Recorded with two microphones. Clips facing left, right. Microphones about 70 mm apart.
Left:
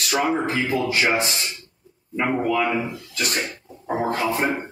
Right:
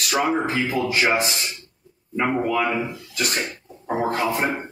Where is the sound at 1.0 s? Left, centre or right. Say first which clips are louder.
Right 2 dB; right.